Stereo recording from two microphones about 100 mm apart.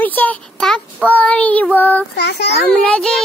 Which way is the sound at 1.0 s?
15° left (ahead or behind).